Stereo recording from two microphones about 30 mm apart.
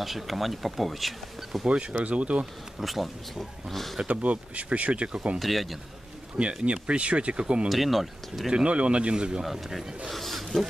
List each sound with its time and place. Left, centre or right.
0.0 s speech: centre
1.7 s speech: right
2.8 s speech: centre
4.1 s speech: right
5.4 s speech: centre
6.3 s speech: right
7.7 s speech: centre
8.6 s speech: right
9.4 s speech: centre
10.0 s a sound: centre